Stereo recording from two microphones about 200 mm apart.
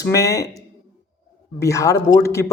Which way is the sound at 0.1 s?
15° left (ahead or behind).